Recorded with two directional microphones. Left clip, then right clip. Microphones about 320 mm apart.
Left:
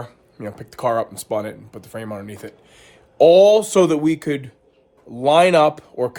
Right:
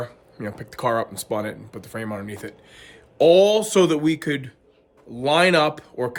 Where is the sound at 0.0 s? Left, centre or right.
Centre.